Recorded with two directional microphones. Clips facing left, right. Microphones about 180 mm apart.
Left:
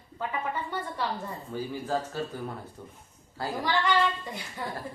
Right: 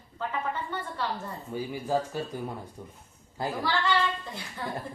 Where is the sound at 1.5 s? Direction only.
10° right (ahead or behind).